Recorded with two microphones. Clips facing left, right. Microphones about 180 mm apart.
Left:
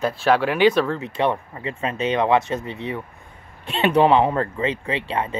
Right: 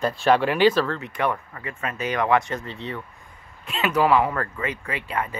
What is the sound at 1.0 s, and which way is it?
Speech, 25° left (ahead or behind).